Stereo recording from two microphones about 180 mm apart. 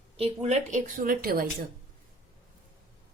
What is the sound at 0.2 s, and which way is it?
A woman's voice, 35° right (ahead or behind).